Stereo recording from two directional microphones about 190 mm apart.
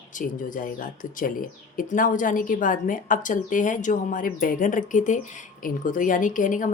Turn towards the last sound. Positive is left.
turn(degrees=45)  # may be behind; listen again after turning